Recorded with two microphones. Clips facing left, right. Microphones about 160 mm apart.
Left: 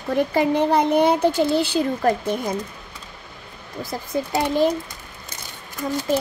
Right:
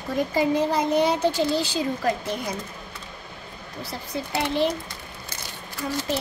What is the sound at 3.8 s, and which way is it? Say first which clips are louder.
Speech: left 6 dB; 45° left (ahead or behind).